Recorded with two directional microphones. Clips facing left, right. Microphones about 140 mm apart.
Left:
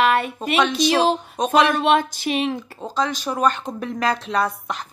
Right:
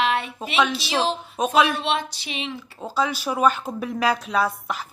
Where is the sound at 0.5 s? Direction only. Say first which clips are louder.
Left 4 dB; 5° right (ahead or behind).